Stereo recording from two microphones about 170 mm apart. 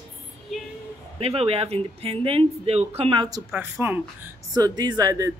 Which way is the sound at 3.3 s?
15° right (ahead or behind).